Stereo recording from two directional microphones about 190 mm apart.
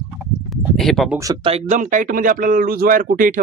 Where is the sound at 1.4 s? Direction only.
35° right (ahead or behind).